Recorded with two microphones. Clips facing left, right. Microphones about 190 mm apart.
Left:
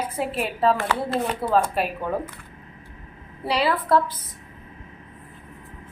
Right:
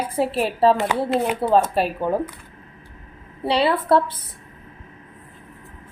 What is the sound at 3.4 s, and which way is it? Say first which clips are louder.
Speech: right 4 dB; 30° right (ahead or behind).